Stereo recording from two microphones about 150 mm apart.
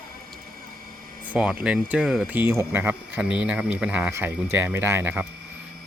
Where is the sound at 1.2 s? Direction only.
10° right (ahead or behind).